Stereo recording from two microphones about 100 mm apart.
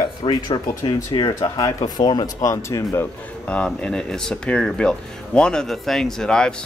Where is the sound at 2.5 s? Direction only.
30° left (ahead or behind).